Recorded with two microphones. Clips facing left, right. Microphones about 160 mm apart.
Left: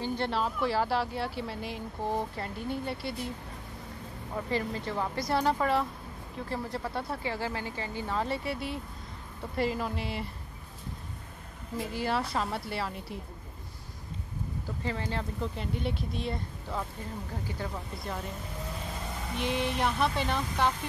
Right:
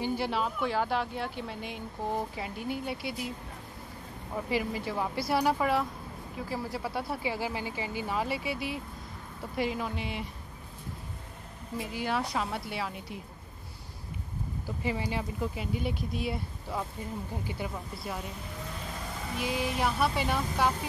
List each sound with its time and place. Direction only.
0.0 s speech: 5° right (ahead or behind)
4.5 s speech: 10° right (ahead or behind)
11.7 s speech: centre (ahead or behind)
14.8 s speech: 15° right (ahead or behind)
17.5 s speech: 20° right (ahead or behind)
17.9 s speech: 5° right (ahead or behind)
19.3 s speech: 5° right (ahead or behind)